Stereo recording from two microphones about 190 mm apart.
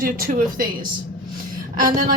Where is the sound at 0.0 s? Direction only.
50° right (ahead or behind).